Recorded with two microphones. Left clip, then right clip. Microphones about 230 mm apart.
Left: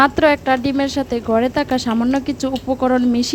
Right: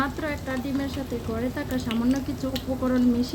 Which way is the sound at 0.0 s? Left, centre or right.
Left.